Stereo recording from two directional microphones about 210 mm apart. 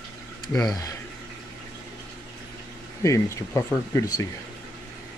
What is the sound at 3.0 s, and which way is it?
Speech, 15° left (ahead or behind).